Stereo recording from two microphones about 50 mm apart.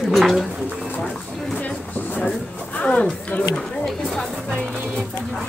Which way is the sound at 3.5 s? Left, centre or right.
Centre.